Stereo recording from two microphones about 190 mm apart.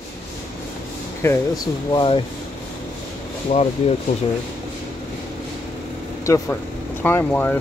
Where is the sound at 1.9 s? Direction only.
25° left (ahead or behind).